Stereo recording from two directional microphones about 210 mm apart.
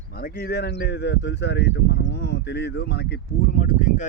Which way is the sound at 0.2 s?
45° left (ahead or behind).